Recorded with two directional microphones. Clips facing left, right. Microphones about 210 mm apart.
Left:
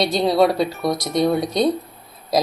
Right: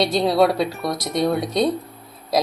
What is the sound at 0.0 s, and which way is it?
Speech, centre (ahead or behind).